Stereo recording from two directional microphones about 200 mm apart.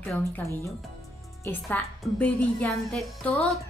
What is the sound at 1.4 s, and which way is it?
A woman's voice, 10° left (ahead or behind).